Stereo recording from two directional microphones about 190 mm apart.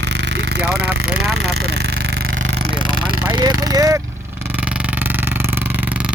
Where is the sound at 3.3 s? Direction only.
20° right (ahead or behind).